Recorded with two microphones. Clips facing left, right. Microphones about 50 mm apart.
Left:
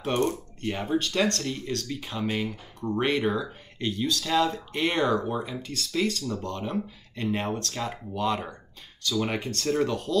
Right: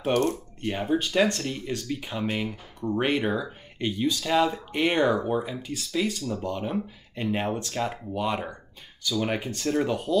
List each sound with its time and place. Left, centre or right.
0.7 s speech: centre